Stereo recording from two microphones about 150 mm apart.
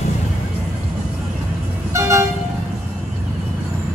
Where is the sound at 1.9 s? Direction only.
20° right (ahead or behind).